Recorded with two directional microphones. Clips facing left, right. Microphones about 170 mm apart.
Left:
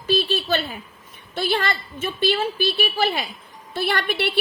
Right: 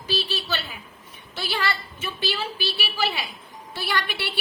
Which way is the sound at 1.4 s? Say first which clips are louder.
Left 5 dB; 50° left (ahead or behind).